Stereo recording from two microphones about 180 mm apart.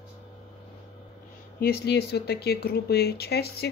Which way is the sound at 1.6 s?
60° left (ahead or behind).